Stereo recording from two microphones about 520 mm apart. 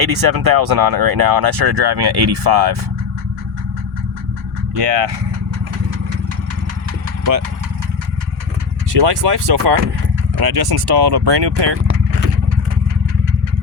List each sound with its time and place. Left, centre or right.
0.0 s speech: right
8.9 s speech: right